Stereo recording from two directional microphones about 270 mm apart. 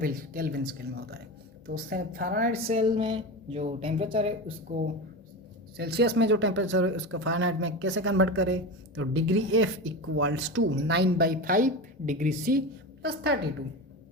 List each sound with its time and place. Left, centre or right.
0.0 s speech: right
2.6 s speech: centre
5.7 s speech: right